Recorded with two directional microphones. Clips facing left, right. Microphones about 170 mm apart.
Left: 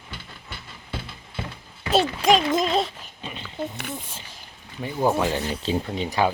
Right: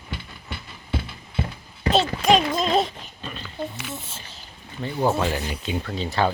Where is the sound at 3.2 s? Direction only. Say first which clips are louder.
Left 1 dB; 15° left (ahead or behind).